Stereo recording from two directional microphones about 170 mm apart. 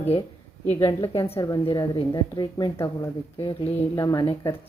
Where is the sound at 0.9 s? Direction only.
30° left (ahead or behind).